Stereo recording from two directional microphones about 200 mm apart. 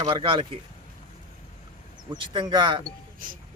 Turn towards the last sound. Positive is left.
turn(degrees=-45)  # may be behind; listen again after turning